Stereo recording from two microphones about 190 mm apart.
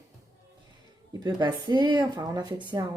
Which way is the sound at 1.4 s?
20° right (ahead or behind).